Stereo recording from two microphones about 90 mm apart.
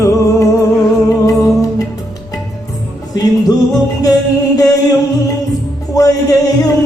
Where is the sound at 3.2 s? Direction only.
45° left (ahead or behind).